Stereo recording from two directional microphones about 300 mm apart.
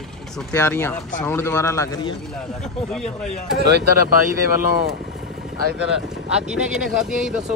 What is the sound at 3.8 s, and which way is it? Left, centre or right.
Speech, left.